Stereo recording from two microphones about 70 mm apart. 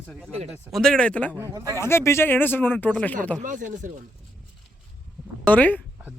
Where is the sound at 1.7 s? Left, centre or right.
Left.